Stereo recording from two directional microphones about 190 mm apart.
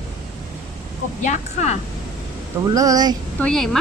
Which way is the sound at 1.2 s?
40° left (ahead or behind).